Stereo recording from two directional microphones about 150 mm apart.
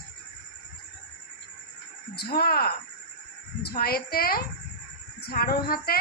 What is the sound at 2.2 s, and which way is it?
Speech, 90° left.